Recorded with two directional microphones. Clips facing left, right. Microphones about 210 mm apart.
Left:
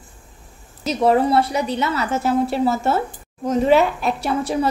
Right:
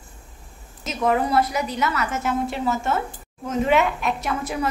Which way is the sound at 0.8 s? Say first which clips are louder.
Left 5 dB; 35° left (ahead or behind).